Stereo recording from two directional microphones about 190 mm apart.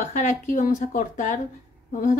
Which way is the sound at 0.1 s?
40° left (ahead or behind).